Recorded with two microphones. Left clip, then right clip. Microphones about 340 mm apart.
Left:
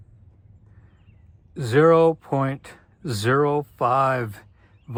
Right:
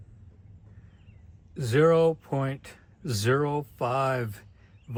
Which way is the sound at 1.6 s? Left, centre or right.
Centre.